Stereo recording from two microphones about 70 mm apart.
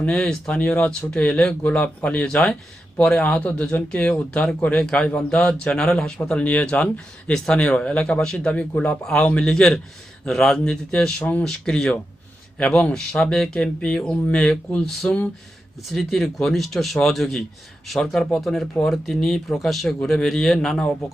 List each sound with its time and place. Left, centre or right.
0.0 s speech: centre
11.2 s speech: left
11.4 s speech: centre
15.9 s speech: centre